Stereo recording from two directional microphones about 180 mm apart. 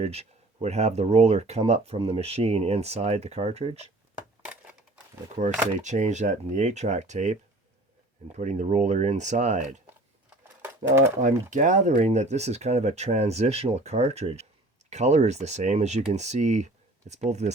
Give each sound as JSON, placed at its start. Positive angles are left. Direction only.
{"t": 0.0, "sound": "speech", "side_deg": -35}
{"t": 5.4, "sound": "speech", "side_deg": -40}
{"t": 10.2, "sound": "bird", "side_deg": -15}
{"t": 11.2, "sound": "speech", "side_deg": -45}